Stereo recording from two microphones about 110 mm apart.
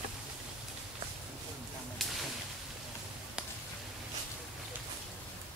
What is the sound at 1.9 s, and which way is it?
Whip, centre (ahead or behind).